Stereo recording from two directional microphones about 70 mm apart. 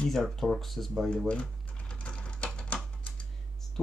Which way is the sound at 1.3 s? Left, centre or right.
Centre.